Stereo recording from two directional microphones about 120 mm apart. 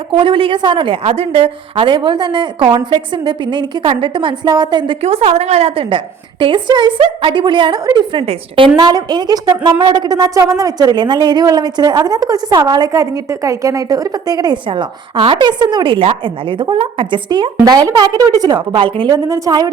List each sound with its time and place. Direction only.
0.1 s a woman's voice: 45° right (ahead or behind)
1.0 s a woman's voice: 55° right (ahead or behind); by 4.9 s 40° right (ahead or behind)
5.0 s a woman's voice: 55° right (ahead or behind); by 18.6 s 35° right (ahead or behind)
18.7 s a woman's voice: 45° right (ahead or behind)
19.1 s a woman's voice: 30° right (ahead or behind)